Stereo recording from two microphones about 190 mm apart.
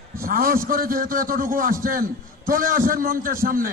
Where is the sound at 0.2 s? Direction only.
50° right (ahead or behind).